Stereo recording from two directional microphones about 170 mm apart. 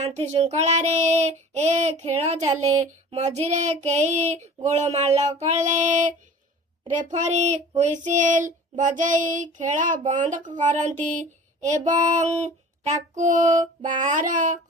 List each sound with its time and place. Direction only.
0.0 s child singing: 35° right (ahead or behind)